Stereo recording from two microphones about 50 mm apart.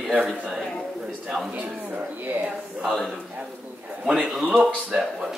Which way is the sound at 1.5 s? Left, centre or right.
Right.